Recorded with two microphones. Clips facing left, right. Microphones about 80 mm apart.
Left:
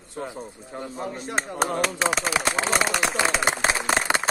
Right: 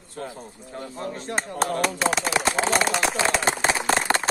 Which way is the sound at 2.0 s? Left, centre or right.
Centre.